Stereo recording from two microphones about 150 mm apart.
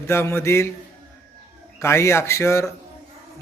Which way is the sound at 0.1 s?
15° left (ahead or behind).